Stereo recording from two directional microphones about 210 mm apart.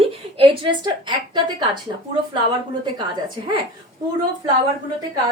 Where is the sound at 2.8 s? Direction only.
20° right (ahead or behind).